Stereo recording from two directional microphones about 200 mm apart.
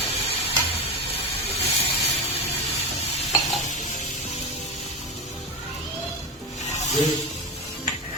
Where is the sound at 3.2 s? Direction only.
Centre (ahead or behind).